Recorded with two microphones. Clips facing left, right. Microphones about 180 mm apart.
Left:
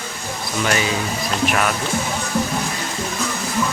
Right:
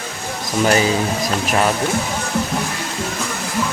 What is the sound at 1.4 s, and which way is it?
Speech, 30° right (ahead or behind).